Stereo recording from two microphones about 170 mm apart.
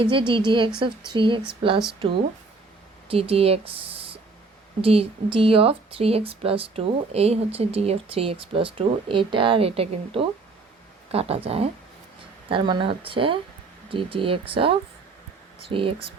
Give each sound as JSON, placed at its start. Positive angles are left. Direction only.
{"t": 0.0, "sound": "speech", "side_deg": -30}
{"t": 3.1, "sound": "a woman's voice", "side_deg": -35}